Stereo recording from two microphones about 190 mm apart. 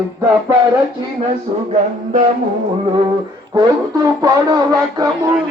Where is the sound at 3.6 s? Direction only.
20° right (ahead or behind).